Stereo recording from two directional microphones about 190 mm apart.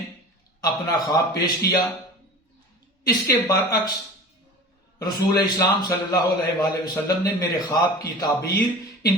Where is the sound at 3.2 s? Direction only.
20° left (ahead or behind).